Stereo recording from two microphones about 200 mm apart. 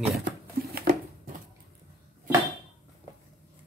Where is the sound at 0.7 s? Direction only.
45° right (ahead or behind).